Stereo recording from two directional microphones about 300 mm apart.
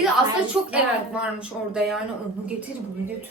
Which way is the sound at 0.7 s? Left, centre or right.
Centre.